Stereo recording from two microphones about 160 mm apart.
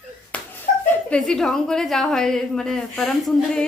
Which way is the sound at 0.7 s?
55° left (ahead or behind).